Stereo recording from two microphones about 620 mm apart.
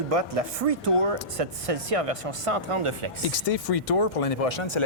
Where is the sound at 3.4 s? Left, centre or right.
Left.